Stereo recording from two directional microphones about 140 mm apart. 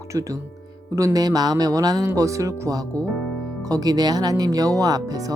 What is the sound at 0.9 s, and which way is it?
Speech, 25° right (ahead or behind).